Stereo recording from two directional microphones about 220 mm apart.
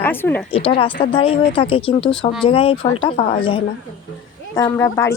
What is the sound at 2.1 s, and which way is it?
Speech, 5° left (ahead or behind).